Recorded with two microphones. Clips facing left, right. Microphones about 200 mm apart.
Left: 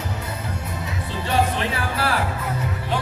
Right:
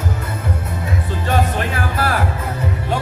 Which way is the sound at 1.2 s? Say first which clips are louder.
Right 1 dB; 50° right (ahead or behind).